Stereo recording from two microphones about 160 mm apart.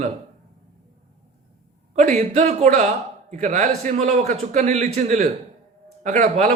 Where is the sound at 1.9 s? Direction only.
45° right (ahead or behind).